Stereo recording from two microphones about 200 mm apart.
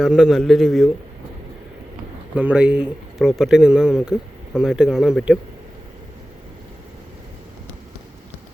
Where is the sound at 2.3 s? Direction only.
5° right (ahead or behind).